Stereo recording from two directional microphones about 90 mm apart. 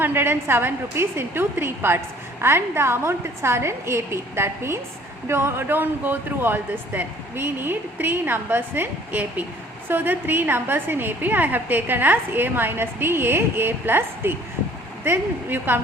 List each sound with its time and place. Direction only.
0.0 s a woman's voice: 25° right (ahead or behind)